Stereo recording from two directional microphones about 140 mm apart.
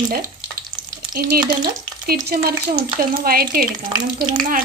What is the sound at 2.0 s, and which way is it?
Speech, 90° right.